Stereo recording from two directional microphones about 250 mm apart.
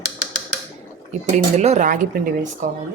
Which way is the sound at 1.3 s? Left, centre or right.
Right.